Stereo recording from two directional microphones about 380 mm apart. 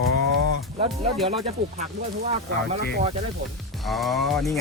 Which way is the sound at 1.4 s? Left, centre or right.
Centre.